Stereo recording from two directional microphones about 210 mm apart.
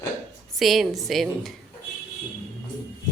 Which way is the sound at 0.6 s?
Centre (ahead or behind).